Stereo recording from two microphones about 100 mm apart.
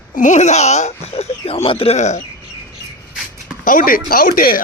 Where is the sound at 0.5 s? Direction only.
90° left; by 2.0 s 70° left (ahead or behind).